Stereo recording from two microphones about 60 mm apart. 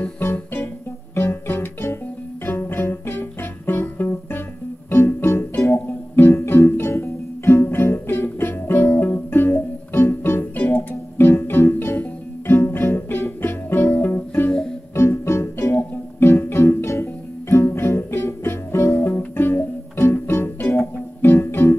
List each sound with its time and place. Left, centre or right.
0.0 s music: left